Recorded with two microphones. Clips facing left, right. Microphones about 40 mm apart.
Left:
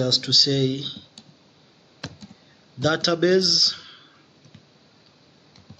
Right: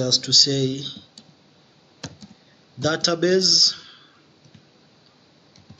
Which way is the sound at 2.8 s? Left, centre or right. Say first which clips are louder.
Left 1 dB; centre.